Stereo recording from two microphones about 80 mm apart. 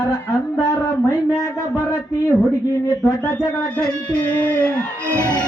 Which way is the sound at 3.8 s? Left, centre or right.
Centre.